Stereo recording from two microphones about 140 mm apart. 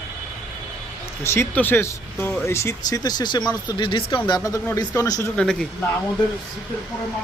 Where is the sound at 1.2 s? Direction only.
20° left (ahead or behind).